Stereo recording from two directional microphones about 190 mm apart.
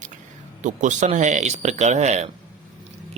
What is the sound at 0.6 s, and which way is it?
Speech, 40° right (ahead or behind).